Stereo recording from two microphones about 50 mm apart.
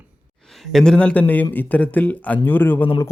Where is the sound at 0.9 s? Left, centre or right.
Left.